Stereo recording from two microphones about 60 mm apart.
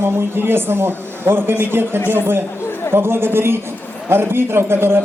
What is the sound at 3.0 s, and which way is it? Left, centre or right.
A man's voice, right.